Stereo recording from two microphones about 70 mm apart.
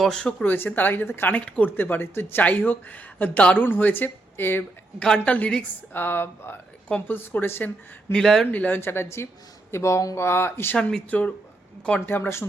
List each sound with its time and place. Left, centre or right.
0.0 s a woman's voice: centre
0.4 s speech: left
1.5 s a woman's voice: centre
1.7 s speech: left
4.9 s a woman's voice: centre
5.9 s speech: left
8.1 s a woman's voice: centre
8.5 s speech: left
8.8 s speech: left
10.2 s speech: left
11.1 s speech: left